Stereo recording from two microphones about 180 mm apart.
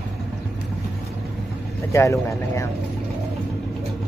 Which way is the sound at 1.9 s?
15° left (ahead or behind).